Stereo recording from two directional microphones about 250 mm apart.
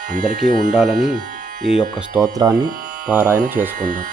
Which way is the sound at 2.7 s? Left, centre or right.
Right.